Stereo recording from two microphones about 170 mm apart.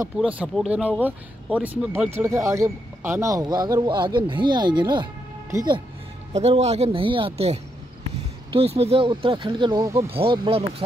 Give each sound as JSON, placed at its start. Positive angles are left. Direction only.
{"t": 0.2, "sound": "speech", "side_deg": -5}
{"t": 6.3, "sound": "speech", "side_deg": -40}
{"t": 10.0, "sound": "speech", "side_deg": -35}